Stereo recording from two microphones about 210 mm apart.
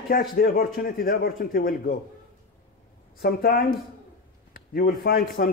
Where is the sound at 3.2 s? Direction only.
45° left (ahead or behind).